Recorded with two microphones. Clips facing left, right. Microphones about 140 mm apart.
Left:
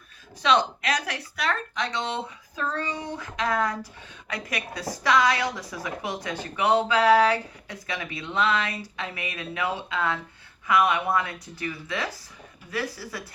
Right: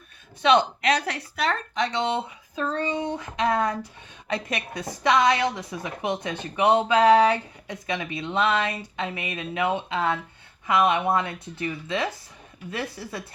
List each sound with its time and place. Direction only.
0.4 s speech: 30° right (ahead or behind)